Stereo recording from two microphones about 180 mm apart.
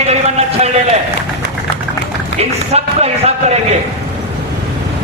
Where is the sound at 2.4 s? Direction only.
35° right (ahead or behind).